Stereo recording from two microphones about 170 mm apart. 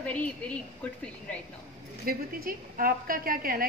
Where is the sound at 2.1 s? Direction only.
60° right (ahead or behind).